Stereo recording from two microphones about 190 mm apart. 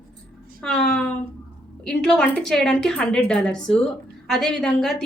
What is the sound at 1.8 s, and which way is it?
A woman's voice, 5° left (ahead or behind).